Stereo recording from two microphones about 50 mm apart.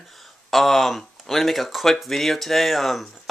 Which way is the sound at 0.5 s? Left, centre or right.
Centre.